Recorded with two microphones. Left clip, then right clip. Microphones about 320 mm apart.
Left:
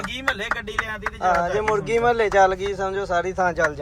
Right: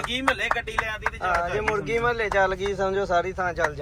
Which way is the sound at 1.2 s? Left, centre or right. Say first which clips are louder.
Left 5 dB; centre.